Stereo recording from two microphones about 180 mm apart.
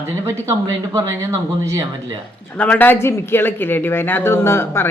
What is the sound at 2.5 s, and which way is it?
Speech, 10° left (ahead or behind).